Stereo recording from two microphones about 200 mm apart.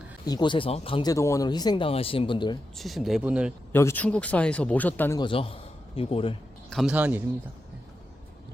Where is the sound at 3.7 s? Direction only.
10° left (ahead or behind).